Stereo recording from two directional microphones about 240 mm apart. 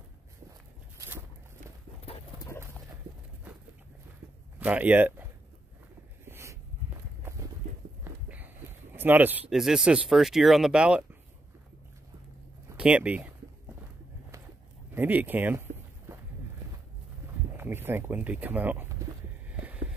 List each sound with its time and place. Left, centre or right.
0.9 s a sound: centre
2.0 s pigeon: left
4.6 s speech: centre
6.2 s a sound: centre
8.0 s speech: centre
12.6 s speech: centre
15.0 s speech: centre
17.6 s speech: centre